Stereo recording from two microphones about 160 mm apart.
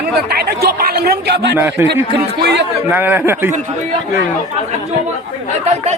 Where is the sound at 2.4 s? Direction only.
90° right.